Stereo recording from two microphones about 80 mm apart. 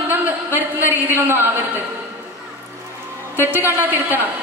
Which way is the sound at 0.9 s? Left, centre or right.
Right.